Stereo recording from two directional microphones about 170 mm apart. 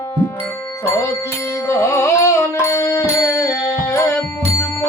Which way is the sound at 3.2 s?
20° left (ahead or behind).